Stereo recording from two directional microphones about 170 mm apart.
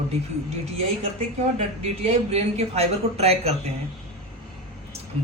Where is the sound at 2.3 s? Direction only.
35° right (ahead or behind).